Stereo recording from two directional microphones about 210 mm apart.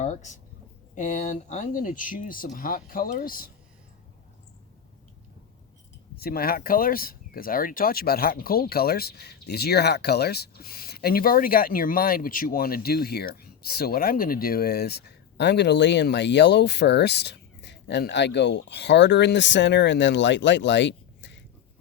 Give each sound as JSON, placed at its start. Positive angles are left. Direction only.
{"t": 0.0, "sound": "speech", "side_deg": 35}
{"t": 6.1, "sound": "speech", "side_deg": 45}